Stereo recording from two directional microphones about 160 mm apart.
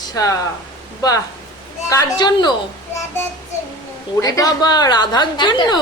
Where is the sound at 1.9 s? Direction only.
25° left (ahead or behind).